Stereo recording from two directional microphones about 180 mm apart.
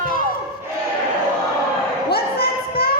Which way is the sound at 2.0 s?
60° left (ahead or behind).